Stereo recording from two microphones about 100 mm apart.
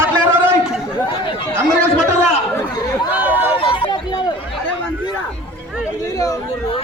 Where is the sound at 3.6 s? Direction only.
60° left (ahead or behind).